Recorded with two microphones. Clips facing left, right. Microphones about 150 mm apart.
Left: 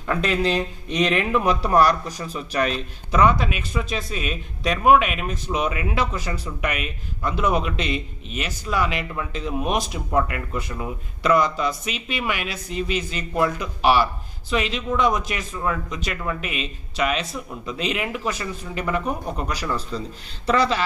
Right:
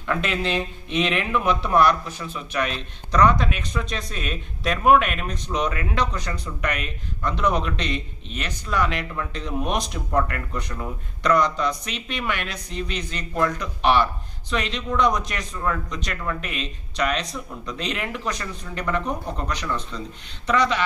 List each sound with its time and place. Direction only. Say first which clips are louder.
0.2 s speech: left 3 dB; 40° left (ahead or behind)
2.7 s a man's voice: left 1 dB; 10° left (ahead or behind)
20.4 s speech: left 1 dB; 30° left (ahead or behind)